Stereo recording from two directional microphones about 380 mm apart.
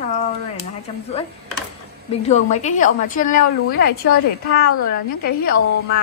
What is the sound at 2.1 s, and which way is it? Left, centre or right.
A woman's voice, centre.